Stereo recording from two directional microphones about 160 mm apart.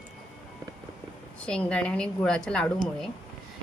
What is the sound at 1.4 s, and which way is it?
Speech, 5° left (ahead or behind).